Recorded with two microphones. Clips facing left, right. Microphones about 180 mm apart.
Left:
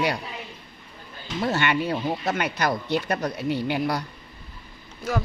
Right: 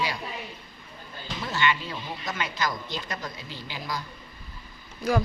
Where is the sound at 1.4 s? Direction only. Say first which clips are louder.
Left 4 dB; 55° left (ahead or behind).